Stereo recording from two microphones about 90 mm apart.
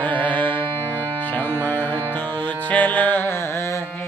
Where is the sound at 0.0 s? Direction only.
15° left (ahead or behind).